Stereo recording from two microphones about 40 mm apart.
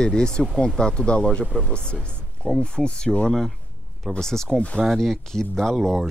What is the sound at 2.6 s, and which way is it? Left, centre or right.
Speech, left.